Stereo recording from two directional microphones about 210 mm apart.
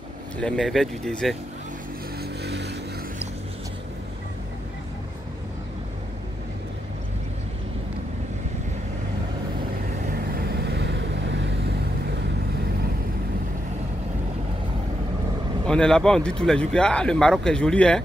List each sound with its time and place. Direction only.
0.4 s speech: 5° left (ahead or behind)
2.4 s vehicle: 55° right (ahead or behind)
10.0 s vehicle: 45° right (ahead or behind)
15.6 s speech: 5° left (ahead or behind)